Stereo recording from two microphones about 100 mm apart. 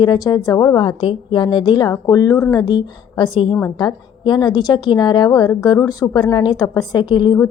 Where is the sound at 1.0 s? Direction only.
60° left (ahead or behind).